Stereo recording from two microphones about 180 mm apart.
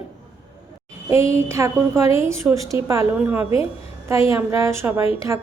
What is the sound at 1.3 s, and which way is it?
A woman's voice, 15° right (ahead or behind).